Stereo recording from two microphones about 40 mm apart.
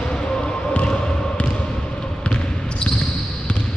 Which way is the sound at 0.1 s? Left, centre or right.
Left.